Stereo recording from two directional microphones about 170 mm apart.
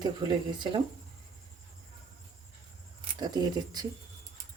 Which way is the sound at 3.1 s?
25° right (ahead or behind).